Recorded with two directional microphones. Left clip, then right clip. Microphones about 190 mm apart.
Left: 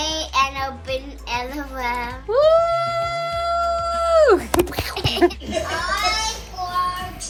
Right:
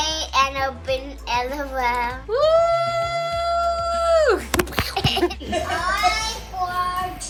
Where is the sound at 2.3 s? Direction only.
30° left (ahead or behind).